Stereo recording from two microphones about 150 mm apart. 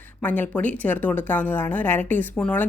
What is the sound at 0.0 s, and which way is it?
Speech, 10° left (ahead or behind).